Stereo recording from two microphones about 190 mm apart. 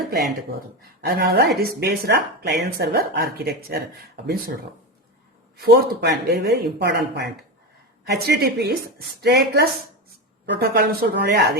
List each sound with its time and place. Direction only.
0.1 s speech: 55° right (ahead or behind)
5.5 s speech: 55° right (ahead or behind)